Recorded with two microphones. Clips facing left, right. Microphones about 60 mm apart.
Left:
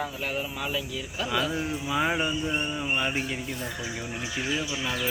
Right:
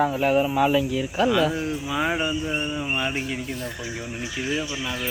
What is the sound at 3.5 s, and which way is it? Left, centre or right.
Speech, centre.